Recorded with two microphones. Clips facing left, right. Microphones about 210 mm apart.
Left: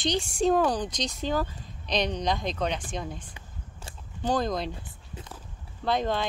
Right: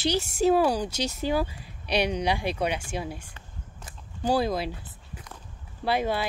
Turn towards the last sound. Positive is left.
turn(degrees=-10)  # may be behind; listen again after turning